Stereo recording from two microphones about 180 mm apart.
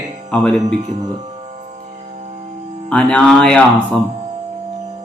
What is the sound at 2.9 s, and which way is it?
Speech, 5° left (ahead or behind).